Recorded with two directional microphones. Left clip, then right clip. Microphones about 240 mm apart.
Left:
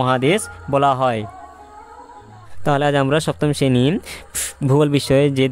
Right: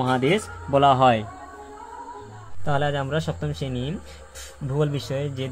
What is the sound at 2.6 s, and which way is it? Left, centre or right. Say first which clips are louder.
Speech: left 8 dB; left.